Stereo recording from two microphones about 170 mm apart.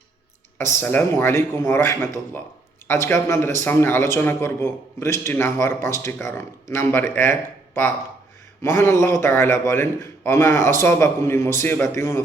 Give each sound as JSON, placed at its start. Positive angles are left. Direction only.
{"t": 0.6, "sound": "a man's voice", "side_deg": 15}